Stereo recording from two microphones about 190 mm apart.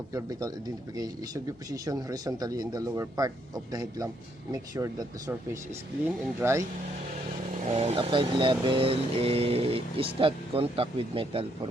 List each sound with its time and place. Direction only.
0.1 s speech: 20° right (ahead or behind)
7.7 s speech: 35° right (ahead or behind)